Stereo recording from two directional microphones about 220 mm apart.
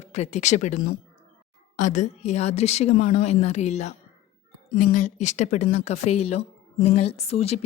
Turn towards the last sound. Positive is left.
turn(degrees=30)  # may be behind; listen again after turning